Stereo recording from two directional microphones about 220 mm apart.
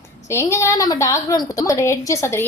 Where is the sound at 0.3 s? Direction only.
15° left (ahead or behind).